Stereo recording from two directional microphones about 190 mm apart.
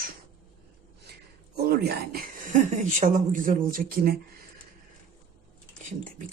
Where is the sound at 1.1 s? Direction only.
55° right (ahead or behind).